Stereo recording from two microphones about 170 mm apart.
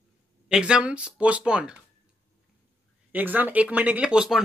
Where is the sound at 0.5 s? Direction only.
5° right (ahead or behind).